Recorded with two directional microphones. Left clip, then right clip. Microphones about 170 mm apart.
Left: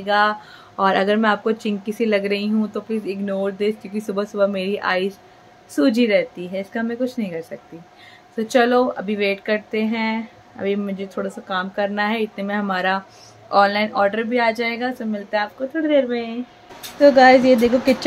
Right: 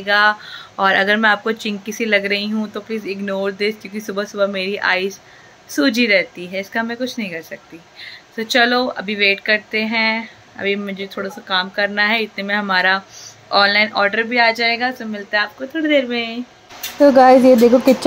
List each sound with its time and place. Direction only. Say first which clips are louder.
0.0 s speech: right 3 dB; 10° left (ahead or behind)
15.7 s speech: right 1 dB; 5° right (ahead or behind)
17.0 s speech: right 2 dB; 35° right (ahead or behind)